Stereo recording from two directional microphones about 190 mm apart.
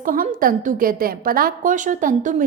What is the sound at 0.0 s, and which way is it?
A woman's voice, 45° right (ahead or behind).